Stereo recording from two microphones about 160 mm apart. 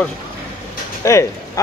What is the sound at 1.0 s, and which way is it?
Speech, 20° left (ahead or behind).